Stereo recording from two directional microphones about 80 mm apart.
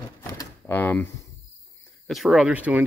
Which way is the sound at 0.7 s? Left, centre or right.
Left.